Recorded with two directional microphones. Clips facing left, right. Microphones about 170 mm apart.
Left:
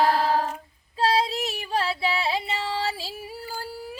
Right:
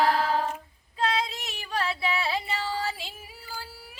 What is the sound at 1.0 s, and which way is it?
Music, 30° left (ahead or behind).